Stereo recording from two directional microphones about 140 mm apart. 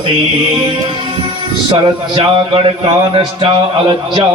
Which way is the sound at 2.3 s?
40° right (ahead or behind).